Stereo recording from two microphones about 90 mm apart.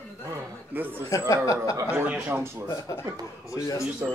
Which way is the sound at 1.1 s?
40° left (ahead or behind).